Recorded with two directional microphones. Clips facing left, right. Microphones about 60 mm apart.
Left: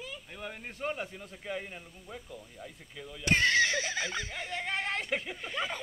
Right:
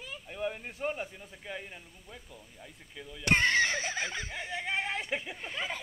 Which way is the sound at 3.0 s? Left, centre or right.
Centre.